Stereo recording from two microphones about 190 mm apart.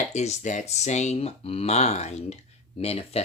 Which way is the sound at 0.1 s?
35° left (ahead or behind).